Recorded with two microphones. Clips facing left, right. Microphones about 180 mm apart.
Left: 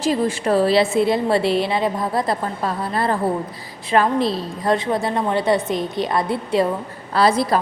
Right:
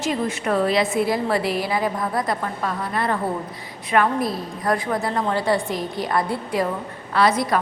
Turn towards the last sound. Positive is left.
turn(degrees=30)  # may be behind; listen again after turning